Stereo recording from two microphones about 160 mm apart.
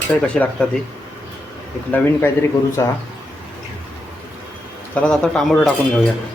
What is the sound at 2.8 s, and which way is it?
Speech, 20° left (ahead or behind).